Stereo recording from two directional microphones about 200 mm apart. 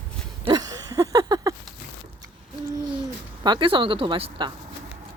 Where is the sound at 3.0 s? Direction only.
20° right (ahead or behind).